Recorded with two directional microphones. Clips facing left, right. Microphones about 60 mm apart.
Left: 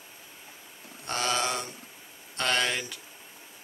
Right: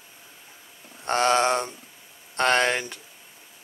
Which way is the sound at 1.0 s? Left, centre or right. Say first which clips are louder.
Right 8 dB; right.